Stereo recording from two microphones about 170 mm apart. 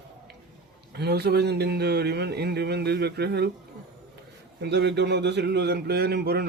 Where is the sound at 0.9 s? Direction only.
70° right (ahead or behind).